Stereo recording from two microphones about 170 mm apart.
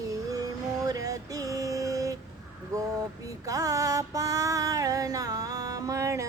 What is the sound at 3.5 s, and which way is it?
Music, 20° right (ahead or behind).